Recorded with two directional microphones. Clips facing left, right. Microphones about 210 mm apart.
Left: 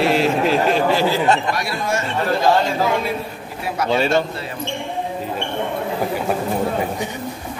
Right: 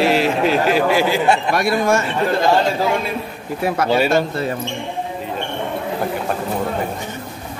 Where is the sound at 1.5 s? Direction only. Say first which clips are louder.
Right 6 dB; 50° right (ahead or behind).